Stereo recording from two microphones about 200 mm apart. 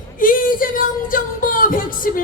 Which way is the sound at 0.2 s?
45° left (ahead or behind).